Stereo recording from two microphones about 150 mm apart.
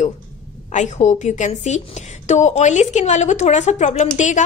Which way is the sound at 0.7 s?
50° left (ahead or behind).